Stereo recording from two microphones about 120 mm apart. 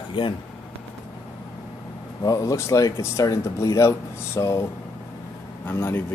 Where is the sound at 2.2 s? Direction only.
30° left (ahead or behind).